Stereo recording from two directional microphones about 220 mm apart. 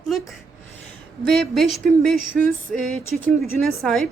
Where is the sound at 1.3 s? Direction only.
Centre (ahead or behind).